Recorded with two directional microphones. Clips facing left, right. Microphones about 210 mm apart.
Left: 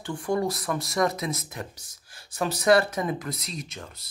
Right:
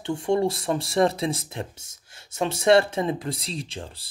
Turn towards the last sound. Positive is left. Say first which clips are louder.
# right 4 dB
turn(degrees=-30)  # may be behind; listen again after turning